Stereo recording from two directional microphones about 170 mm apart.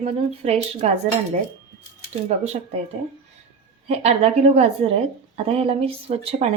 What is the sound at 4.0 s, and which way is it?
Speech, 40° right (ahead or behind).